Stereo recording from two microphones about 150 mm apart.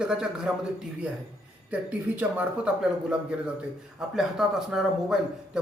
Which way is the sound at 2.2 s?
10° right (ahead or behind).